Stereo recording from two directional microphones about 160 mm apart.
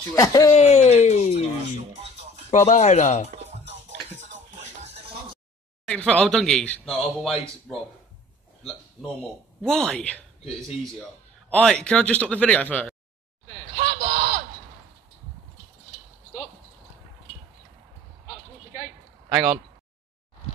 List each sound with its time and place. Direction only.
0.1 s speech: 20° left (ahead or behind)
0.6 s a sound: 45° left (ahead or behind)
2.5 s speech: 45° left (ahead or behind)
3.4 s music: 45° right (ahead or behind)
5.9 s speech: 5° left (ahead or behind)
9.6 s speech: 5° left (ahead or behind)
11.5 s speech: 5° left (ahead or behind)
13.7 s a sound: 50° right (ahead or behind)